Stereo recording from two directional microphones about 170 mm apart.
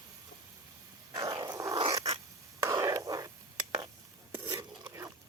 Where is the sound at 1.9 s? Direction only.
20° right (ahead or behind).